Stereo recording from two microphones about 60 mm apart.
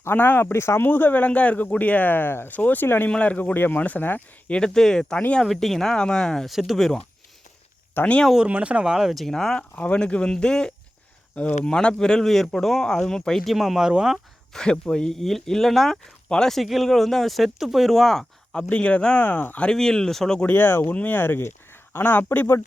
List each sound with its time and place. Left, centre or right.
0.0 s speech: left
0.9 s speech: left
3.1 s speech: left
4.4 s speech: centre
6.5 s speech: centre
8.0 s speech: left
8.4 s speech: right
9.2 s speech: centre
9.7 s speech: left; by 14.2 s centre
14.5 s speech: centre
18.7 s speech: left
19.7 s speech: centre
20.4 s speech: left